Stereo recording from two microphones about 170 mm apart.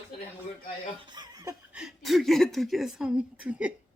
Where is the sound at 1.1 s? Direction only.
25° right (ahead or behind).